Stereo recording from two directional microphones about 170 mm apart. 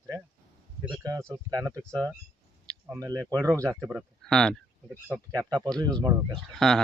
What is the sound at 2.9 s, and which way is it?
Speech, 20° right (ahead or behind).